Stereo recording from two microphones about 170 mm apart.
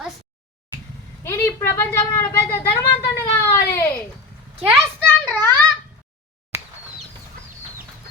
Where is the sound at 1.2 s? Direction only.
15° left (ahead or behind).